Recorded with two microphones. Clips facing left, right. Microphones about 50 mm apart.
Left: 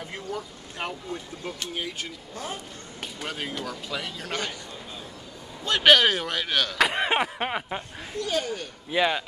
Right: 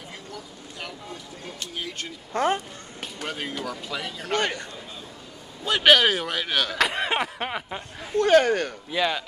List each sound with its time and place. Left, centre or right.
0.1 s speech: left
2.3 s a man's voice: right
3.3 s speech: centre
4.4 s a man's voice: right
5.6 s speech: centre
8.2 s speech: right
8.9 s a man's voice: centre